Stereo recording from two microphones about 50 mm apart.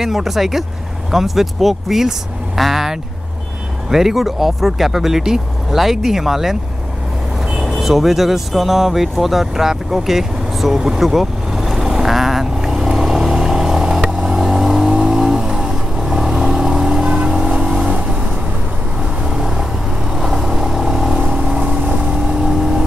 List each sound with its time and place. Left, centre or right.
0.0 s speech: centre
7.6 s speech: centre
9.1 s vehicle: centre
19.2 s vehicle: centre